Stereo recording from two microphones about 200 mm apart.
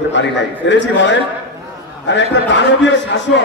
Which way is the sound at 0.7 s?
65° left (ahead or behind).